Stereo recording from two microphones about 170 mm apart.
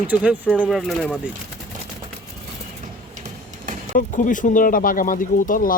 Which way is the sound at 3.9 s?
50° left (ahead or behind).